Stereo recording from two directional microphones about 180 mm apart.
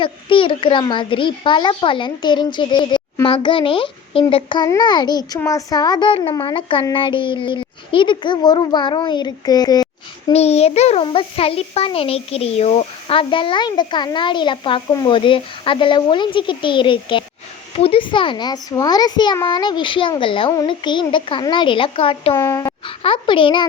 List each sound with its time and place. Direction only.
0.0 s a child's voice: 30° left (ahead or behind)
10.3 s a child's voice: 35° left (ahead or behind)
22.4 s speech: 15° left (ahead or behind)
23.0 s a child's voice: 30° left (ahead or behind)